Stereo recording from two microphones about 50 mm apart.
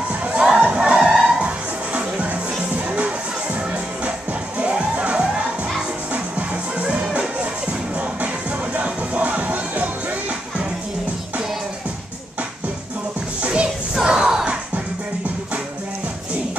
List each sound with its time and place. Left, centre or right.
0.1 s crowd: right
0.5 s music: centre; by 10.1 s right
13.4 s music: right
13.9 s crowd: centre